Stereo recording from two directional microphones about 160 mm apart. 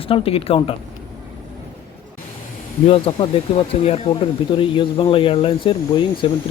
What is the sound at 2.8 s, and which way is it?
A man's voice, 35° left (ahead or behind).